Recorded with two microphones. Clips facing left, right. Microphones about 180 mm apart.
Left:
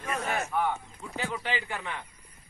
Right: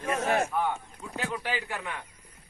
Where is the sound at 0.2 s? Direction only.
45° right (ahead or behind).